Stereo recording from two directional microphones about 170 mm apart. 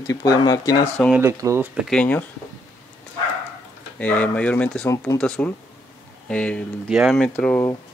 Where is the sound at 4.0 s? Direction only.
5° left (ahead or behind).